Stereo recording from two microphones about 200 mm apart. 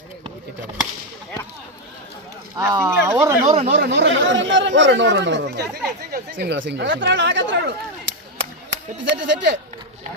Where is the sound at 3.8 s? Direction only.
65° right (ahead or behind).